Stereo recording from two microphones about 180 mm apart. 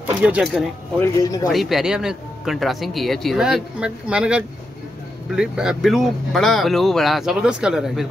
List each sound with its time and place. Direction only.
0.0 s speech: 5° right (ahead or behind)
0.9 s speech: 15° left (ahead or behind)
1.5 s speech: centre (ahead or behind)